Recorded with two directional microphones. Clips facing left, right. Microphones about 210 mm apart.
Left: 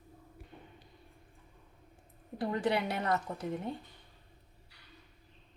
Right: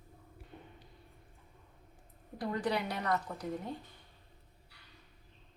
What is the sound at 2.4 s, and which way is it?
Dishes, 25° left (ahead or behind).